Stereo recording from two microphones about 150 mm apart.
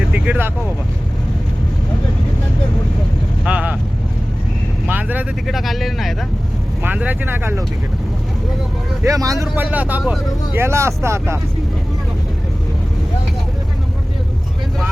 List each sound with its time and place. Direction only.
0.1 s speech: 10° right (ahead or behind)
3.4 s speech: 10° right (ahead or behind)
4.9 s speech: 10° right (ahead or behind)
5.5 s speech: centre (ahead or behind)
9.0 s speech: 20° right (ahead or behind)
9.6 s speech: 10° right (ahead or behind)